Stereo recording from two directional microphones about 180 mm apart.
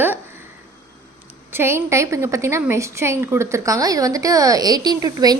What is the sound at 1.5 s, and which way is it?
A woman's voice, 15° right (ahead or behind).